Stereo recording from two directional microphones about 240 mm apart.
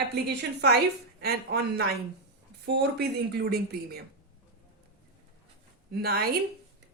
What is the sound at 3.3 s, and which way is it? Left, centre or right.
Speech, right.